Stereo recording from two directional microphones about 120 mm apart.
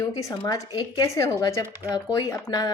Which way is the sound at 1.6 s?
15° right (ahead or behind).